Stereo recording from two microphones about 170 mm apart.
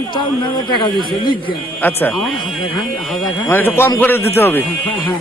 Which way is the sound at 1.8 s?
10° left (ahead or behind).